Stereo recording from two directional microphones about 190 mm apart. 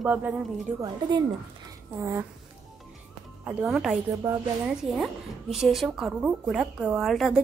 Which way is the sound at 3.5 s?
5° right (ahead or behind).